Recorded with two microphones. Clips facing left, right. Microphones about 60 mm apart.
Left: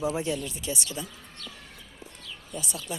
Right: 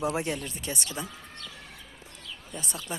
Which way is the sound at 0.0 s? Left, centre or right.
Right.